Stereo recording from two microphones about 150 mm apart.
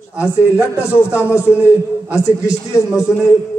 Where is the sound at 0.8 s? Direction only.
15° left (ahead or behind).